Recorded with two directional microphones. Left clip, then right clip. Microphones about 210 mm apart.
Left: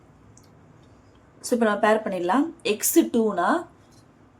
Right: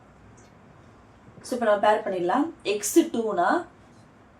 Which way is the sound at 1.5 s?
45° left (ahead or behind).